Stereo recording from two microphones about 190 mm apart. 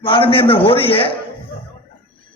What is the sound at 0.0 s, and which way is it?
A man's voice, 25° left (ahead or behind).